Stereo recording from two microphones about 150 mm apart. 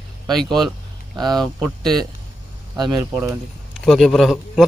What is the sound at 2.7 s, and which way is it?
Speech, 25° right (ahead or behind).